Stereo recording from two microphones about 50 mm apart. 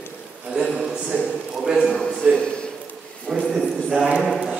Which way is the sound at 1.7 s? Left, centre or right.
Centre.